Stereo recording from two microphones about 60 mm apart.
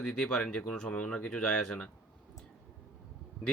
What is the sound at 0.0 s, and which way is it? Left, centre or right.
Speech, centre.